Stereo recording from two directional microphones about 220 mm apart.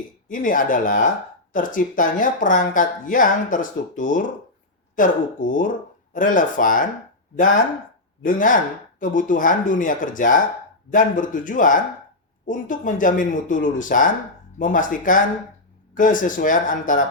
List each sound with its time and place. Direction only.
0.3 s speech: 40° left (ahead or behind)